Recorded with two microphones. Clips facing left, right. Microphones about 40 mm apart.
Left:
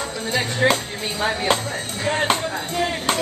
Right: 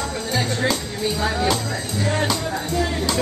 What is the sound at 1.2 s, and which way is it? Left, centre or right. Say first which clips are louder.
Speech: left 3 dB; left.